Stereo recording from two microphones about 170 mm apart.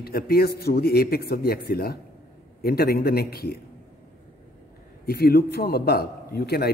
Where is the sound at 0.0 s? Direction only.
65° left (ahead or behind).